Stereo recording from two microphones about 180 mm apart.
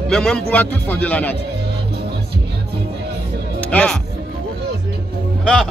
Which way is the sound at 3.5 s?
5° left (ahead or behind).